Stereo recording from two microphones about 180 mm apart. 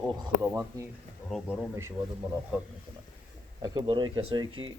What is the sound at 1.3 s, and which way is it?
Speech, 5° right (ahead or behind).